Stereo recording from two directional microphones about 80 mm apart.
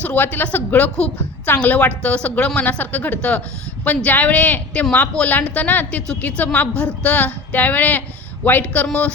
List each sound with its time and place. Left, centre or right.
0.0 s a woman's voice: left